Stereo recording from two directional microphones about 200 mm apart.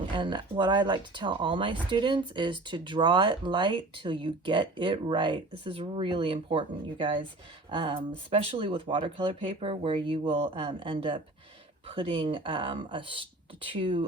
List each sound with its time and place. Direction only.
0.2 s speech: 25° right (ahead or behind)